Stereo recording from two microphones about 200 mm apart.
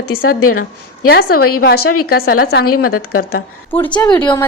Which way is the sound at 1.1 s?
50° left (ahead or behind).